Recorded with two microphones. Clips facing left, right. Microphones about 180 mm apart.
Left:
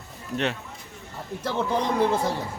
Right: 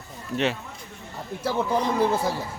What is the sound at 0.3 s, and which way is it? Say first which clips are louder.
Speech: right 2 dB; 20° left (ahead or behind).